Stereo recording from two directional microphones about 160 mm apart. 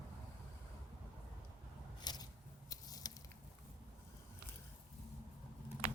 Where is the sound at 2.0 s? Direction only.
25° left (ahead or behind).